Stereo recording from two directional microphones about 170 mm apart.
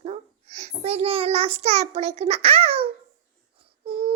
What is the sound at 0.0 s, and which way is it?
A child's voice, 40° right (ahead or behind).